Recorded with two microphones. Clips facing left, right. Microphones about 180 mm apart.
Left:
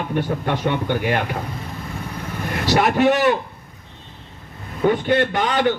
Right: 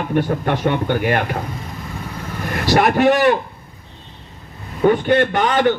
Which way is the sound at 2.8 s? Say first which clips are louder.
Right 2 dB; 55° right (ahead or behind).